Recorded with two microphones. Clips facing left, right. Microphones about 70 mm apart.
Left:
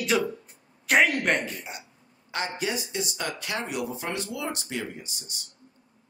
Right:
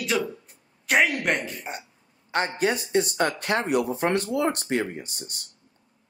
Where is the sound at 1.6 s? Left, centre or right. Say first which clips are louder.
Right 4 dB; right.